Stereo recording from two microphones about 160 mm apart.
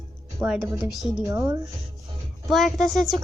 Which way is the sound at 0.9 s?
Centre (ahead or behind).